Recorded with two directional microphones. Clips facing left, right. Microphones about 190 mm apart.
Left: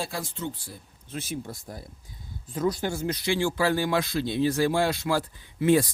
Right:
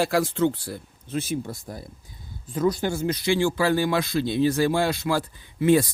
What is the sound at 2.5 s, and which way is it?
Speech, 90° right.